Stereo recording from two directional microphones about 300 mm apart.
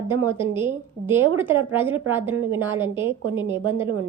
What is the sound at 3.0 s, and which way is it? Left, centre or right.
Speech, centre.